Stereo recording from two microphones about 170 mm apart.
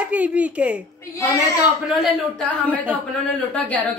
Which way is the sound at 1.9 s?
5° left (ahead or behind).